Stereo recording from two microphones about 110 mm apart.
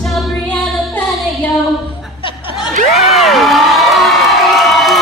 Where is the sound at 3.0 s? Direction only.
Centre (ahead or behind).